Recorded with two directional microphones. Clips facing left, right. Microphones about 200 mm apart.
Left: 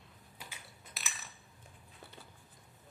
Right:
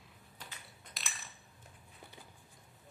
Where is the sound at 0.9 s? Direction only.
5° left (ahead or behind).